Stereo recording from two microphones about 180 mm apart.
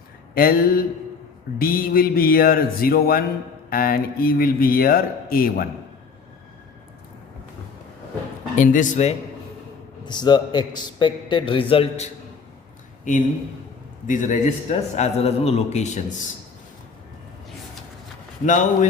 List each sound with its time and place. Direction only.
0.3 s a man's voice: 55° left (ahead or behind)
8.5 s speech: 45° left (ahead or behind)
10.1 s a man's voice: 25° left (ahead or behind)
14.1 s a man's voice: 45° left (ahead or behind)
18.4 s speech: 40° left (ahead or behind)